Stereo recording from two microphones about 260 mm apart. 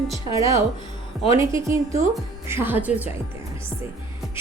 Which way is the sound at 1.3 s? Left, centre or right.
Centre.